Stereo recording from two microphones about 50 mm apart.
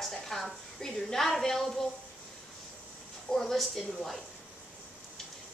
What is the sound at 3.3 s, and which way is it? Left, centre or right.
A woman's voice, centre.